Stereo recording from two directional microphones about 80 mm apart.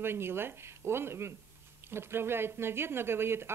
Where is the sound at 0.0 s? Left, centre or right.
Right.